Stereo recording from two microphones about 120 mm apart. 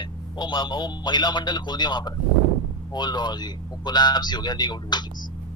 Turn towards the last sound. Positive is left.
turn(degrees=35)  # may be behind; listen again after turning